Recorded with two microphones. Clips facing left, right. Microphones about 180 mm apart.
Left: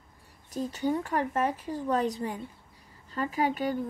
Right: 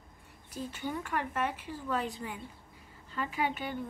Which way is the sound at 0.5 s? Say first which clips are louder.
Left 8 dB; 40° left (ahead or behind).